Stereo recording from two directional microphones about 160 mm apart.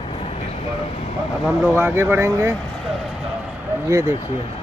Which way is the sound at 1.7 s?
15° right (ahead or behind).